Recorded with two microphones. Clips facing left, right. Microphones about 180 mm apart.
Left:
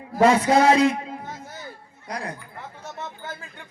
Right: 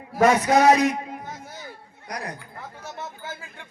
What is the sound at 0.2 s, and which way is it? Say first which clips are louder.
Speech: left 1 dB; 30° left (ahead or behind).